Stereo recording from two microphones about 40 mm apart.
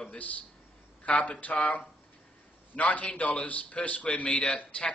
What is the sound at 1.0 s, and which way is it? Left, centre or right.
A man's voice, left.